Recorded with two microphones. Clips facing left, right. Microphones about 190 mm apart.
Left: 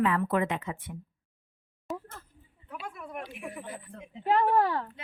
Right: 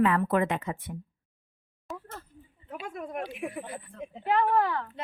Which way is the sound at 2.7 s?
45° right (ahead or behind).